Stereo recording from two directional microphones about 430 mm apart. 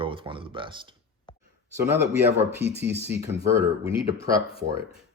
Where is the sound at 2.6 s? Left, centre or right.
Right.